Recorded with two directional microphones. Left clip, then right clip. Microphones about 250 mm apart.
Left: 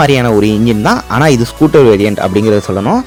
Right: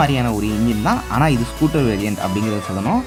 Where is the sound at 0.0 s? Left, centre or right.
Left.